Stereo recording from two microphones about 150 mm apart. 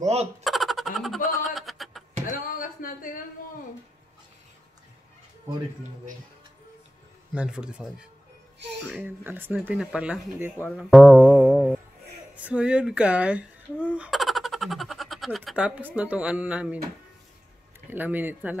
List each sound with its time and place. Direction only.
0.0 s speech: 45° right (ahead or behind)
0.4 s a sound: centre (ahead or behind)
2.2 s a sound: 65° left (ahead or behind)
7.3 s speech: 5° right (ahead or behind)
10.9 s music: centre (ahead or behind)
12.4 s speech: 10° right (ahead or behind)
17.8 s speech: 10° right (ahead or behind)